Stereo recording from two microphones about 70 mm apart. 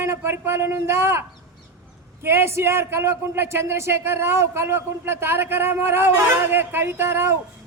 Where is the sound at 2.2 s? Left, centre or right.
Right.